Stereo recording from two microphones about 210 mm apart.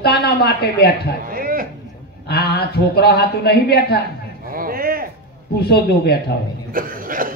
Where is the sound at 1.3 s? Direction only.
45° right (ahead or behind).